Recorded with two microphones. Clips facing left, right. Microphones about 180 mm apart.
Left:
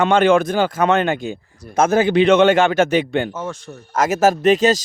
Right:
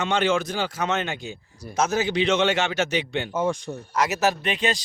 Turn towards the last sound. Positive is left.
turn(degrees=40)  # may be behind; listen again after turning